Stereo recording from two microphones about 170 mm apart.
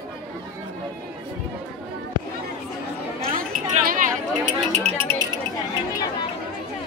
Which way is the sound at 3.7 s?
50° right (ahead or behind).